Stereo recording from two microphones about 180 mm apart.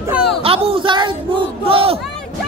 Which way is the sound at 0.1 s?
5° right (ahead or behind).